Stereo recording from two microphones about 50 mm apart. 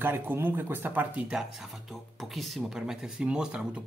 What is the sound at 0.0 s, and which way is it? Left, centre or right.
Speech, right.